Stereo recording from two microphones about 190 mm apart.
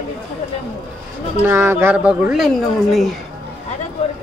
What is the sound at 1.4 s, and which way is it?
Speech, 10° right (ahead or behind).